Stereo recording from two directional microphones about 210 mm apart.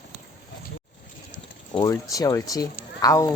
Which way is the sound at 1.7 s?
15° left (ahead or behind).